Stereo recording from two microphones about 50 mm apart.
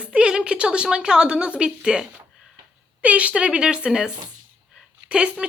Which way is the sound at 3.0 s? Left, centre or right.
Right.